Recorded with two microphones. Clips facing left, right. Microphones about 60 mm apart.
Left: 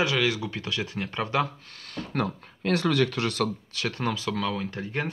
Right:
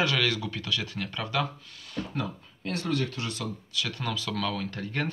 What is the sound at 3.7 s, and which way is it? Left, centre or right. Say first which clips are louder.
Speech: left 3 dB; left.